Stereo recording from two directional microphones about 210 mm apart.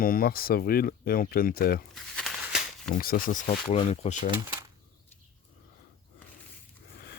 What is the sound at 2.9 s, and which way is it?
Speech, 40° left (ahead or behind).